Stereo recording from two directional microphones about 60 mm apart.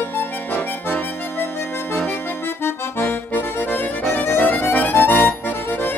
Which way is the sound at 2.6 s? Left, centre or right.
Left.